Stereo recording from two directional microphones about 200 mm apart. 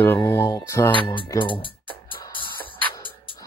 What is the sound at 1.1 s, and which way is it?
Speech, 25° left (ahead or behind).